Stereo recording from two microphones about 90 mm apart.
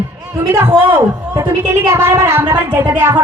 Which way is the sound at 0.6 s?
25° right (ahead or behind).